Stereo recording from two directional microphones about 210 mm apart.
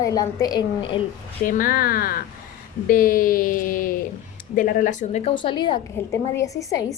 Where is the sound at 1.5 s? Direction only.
40° left (ahead or behind); by 6.8 s 15° left (ahead or behind).